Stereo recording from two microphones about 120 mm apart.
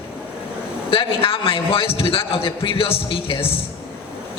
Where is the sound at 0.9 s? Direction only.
50° left (ahead or behind).